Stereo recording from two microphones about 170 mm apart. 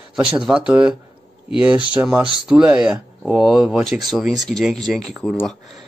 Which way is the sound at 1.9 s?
5° right (ahead or behind).